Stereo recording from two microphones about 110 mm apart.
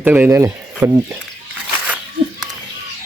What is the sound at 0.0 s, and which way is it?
Speech, 15° right (ahead or behind).